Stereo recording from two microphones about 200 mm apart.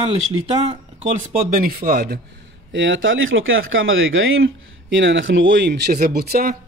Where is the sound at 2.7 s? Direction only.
70° right (ahead or behind).